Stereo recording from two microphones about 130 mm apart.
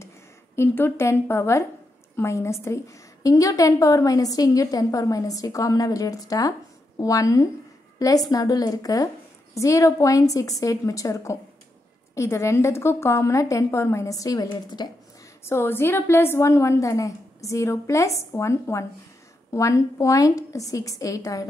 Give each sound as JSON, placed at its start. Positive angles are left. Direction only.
{"t": 0.6, "sound": "a woman's voice", "side_deg": 20}
{"t": 15.4, "sound": "a woman's voice", "side_deg": 20}